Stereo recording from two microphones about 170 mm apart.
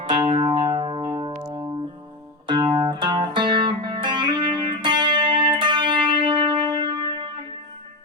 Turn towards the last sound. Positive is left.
turn(degrees=-30)  # may be behind; listen again after turning